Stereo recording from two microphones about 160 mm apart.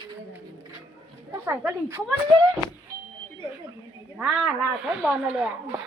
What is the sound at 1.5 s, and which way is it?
Speech, 15° right (ahead or behind).